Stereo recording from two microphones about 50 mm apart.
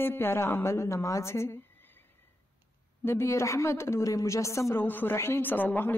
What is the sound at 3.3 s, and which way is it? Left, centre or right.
A woman's voice, left.